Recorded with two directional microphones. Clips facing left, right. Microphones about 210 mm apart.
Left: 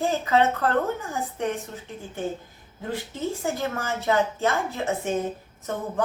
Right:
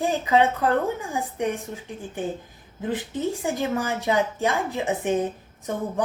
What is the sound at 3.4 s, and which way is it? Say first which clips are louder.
A woman's voice: right 3 dB; 15° right (ahead or behind).